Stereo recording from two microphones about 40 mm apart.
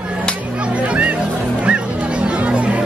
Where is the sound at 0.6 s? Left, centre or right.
Right.